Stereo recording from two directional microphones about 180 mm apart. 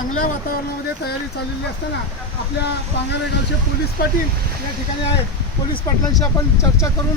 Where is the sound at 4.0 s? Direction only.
55° left (ahead or behind).